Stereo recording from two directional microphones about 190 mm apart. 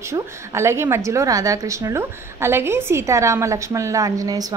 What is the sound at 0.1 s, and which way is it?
A woman's voice, 15° right (ahead or behind).